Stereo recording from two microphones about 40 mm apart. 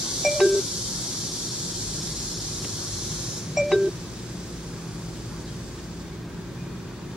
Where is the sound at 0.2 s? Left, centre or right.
Centre.